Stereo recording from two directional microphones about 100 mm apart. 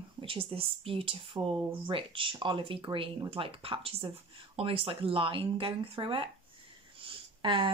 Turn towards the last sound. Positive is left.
turn(degrees=-55)  # may be behind; listen again after turning